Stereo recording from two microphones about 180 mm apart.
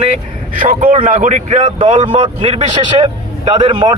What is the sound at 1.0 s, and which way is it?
A man's voice, 40° right (ahead or behind).